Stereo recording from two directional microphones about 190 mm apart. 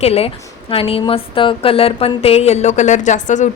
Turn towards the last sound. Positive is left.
turn(degrees=40)  # may be behind; listen again after turning